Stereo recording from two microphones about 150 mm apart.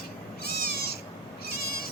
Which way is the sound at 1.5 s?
90° left.